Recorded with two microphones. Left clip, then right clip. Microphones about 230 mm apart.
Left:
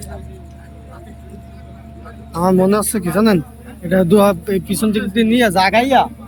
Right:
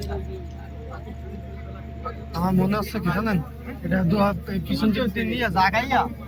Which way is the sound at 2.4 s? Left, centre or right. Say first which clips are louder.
Left 11 dB; left.